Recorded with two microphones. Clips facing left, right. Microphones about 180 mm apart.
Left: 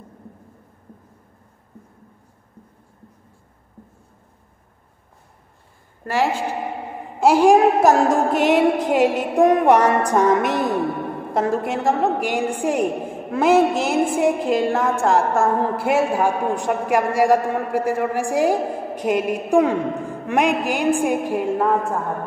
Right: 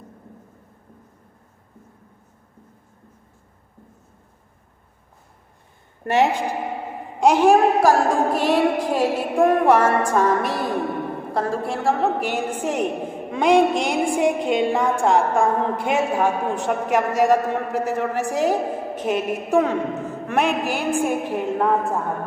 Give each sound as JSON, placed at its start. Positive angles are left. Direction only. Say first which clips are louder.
{"t": 6.0, "sound": "a woman's voice", "louder": "right 2 dB", "side_deg": -20}
{"t": 7.2, "sound": "a man's voice", "louder": "left 1 dB", "side_deg": 10}